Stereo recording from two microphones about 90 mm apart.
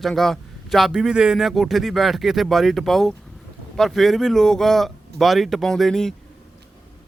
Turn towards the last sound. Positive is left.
turn(degrees=5)  # may be behind; listen again after turning